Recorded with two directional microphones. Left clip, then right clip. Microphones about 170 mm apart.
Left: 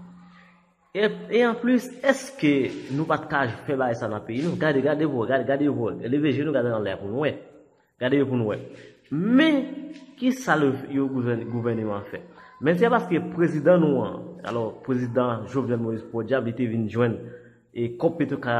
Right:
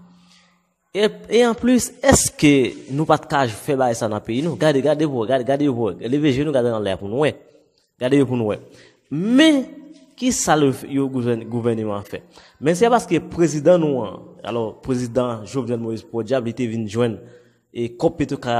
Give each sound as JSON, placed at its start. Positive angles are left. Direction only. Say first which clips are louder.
{"t": 0.9, "sound": "a man's voice", "louder": "right 5 dB", "side_deg": -50}
{"t": 8.0, "sound": "a man's voice", "louder": "right 5 dB", "side_deg": -50}
{"t": 13.8, "sound": "a man's voice", "louder": "right 2 dB", "side_deg": -20}
{"t": 14.4, "sound": "a man's voice", "louder": "right 4 dB", "side_deg": -45}